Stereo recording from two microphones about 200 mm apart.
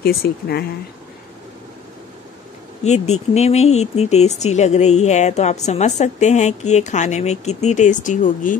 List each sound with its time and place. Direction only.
0.0 s speech: 50° left (ahead or behind)
2.8 s speech: 35° left (ahead or behind)